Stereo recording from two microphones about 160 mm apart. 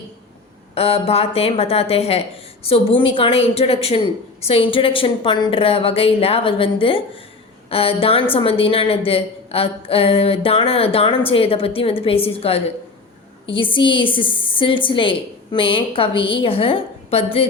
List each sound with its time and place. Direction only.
0.7 s a woman's voice: 40° left (ahead or behind)